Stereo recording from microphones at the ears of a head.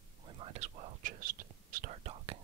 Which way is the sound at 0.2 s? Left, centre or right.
Right.